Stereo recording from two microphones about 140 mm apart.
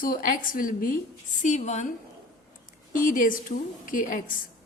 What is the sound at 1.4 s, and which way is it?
Speech, 60° left (ahead or behind).